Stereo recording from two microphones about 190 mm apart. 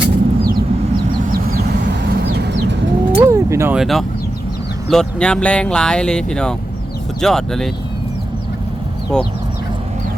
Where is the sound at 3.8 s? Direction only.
Centre (ahead or behind).